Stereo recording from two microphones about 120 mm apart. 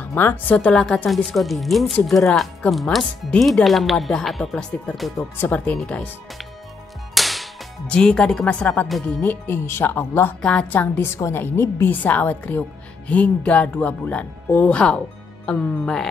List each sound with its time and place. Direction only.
0.0 s speech: 15° left (ahead or behind)
5.1 s speech: 15° left (ahead or behind)
7.2 s music: centre (ahead or behind)
9.2 s speech: 15° left (ahead or behind)